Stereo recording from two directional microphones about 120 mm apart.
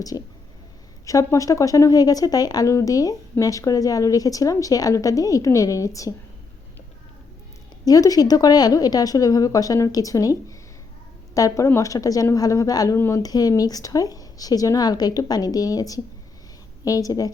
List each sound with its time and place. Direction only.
0.1 s a woman's voice: 35° left (ahead or behind)
7.9 s speech: 30° left (ahead or behind)
11.3 s a woman's voice: 25° left (ahead or behind)